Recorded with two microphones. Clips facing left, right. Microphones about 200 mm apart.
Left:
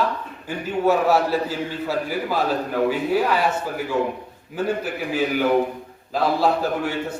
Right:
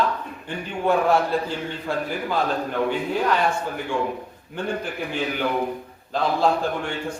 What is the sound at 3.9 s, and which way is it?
Speech, 25° left (ahead or behind).